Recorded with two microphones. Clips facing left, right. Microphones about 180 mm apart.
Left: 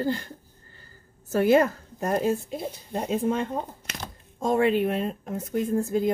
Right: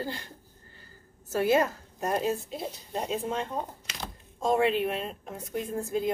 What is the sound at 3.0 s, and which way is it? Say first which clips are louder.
Speech: left 6 dB; 55° left (ahead or behind).